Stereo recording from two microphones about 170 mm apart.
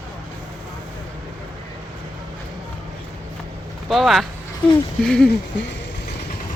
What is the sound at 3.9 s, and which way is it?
Speech, centre (ahead or behind).